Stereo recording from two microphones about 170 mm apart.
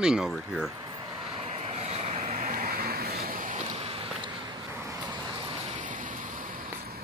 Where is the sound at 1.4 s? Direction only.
40° right (ahead or behind).